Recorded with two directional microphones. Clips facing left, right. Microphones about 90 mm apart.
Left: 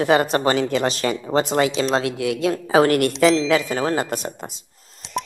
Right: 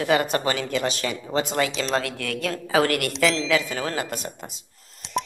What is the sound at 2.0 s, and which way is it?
A woman's voice, 20° left (ahead or behind).